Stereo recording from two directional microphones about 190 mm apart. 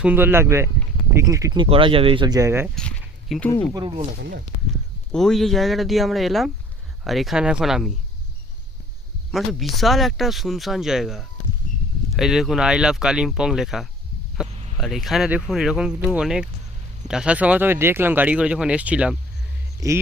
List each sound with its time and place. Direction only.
0.0 s speech: 10° right (ahead or behind)
2.7 s a sound: 5° left (ahead or behind)
4.2 s speech: 55° right (ahead or behind)
5.1 s speech: centre (ahead or behind)
9.3 s speech: centre (ahead or behind); by 20.0 s 15° right (ahead or behind)